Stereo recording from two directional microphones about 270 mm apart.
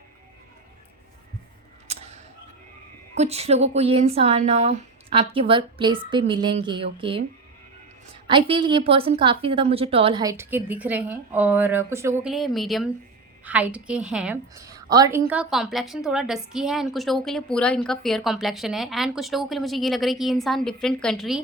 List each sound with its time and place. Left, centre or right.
3.2 s speech: right
8.3 s a woman's voice: centre